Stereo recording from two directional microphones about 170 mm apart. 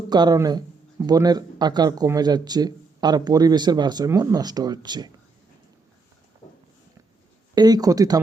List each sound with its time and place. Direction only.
0.1 s speech: 25° right (ahead or behind)
7.5 s speech: 25° right (ahead or behind)